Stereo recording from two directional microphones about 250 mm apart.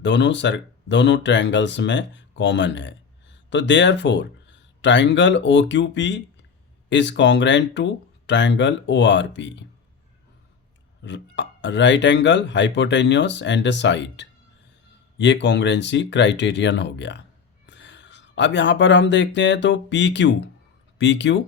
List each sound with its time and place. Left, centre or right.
0.0 s speech: left
11.0 s speech: left